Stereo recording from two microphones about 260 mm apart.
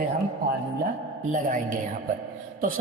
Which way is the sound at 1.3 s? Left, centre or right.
Right.